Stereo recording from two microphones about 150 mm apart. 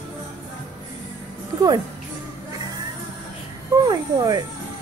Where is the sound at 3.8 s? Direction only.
25° right (ahead or behind).